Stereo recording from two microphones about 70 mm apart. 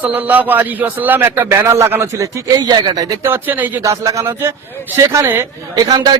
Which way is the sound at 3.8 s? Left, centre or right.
Right.